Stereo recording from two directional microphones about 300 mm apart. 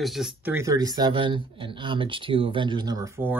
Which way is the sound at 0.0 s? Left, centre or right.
Centre.